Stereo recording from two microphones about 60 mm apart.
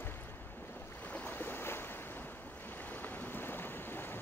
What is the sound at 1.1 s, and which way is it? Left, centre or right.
Boat, left.